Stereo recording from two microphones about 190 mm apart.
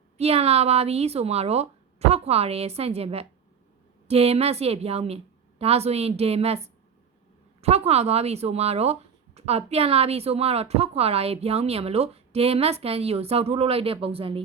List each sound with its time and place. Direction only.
0.2 s speech: 30° right (ahead or behind)
7.6 s speech: 35° right (ahead or behind)